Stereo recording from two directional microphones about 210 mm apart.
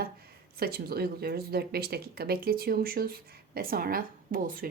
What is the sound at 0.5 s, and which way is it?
Speech, 45° right (ahead or behind).